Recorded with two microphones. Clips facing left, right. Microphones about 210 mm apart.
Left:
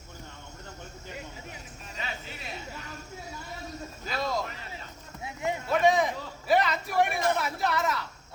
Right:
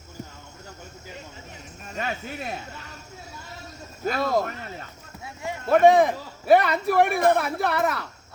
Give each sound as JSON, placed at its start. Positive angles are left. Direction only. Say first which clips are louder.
{"t": 1.9, "sound": "speech", "louder": "right 9 dB", "side_deg": -55}
{"t": 4.0, "sound": "speech", "louder": "right 8 dB", "side_deg": -55}
{"t": 5.2, "sound": "clip-clop", "louder": "left 2 dB", "side_deg": 20}
{"t": 5.6, "sound": "speech", "louder": "right 8 dB", "side_deg": -55}